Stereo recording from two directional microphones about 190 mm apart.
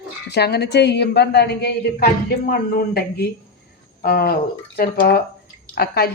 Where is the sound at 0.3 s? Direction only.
60° left (ahead or behind).